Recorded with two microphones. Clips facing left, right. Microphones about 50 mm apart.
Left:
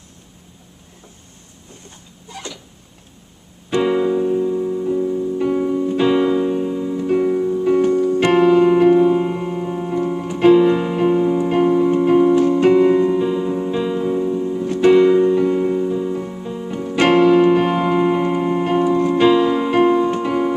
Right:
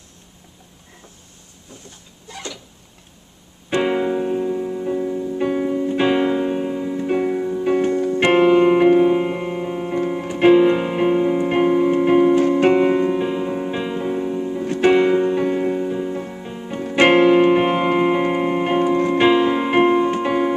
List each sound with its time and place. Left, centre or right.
3.7 s music: right
5.7 s keyboard: right
16.8 s music: right